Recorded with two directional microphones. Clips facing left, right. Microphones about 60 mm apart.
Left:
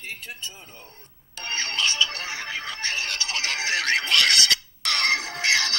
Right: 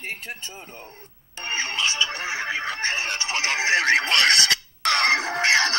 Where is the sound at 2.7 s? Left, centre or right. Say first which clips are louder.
Right 3 dB; right.